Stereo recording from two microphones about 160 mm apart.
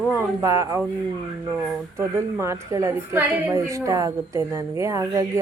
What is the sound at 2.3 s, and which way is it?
A woman's voice, 20° right (ahead or behind).